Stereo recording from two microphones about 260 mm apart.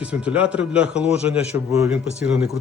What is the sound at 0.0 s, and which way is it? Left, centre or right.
Speech, centre.